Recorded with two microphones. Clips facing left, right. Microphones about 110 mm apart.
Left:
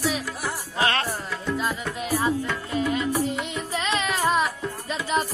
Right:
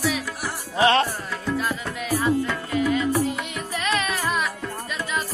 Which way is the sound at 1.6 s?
20° left (ahead or behind).